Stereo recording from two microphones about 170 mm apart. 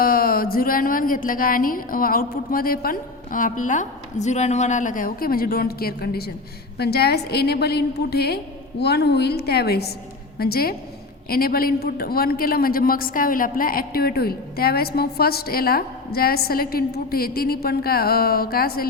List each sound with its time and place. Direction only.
0.0 s a man's voice: 60° left (ahead or behind)